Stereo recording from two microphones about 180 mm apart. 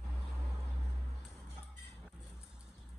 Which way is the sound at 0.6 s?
Centre (ahead or behind).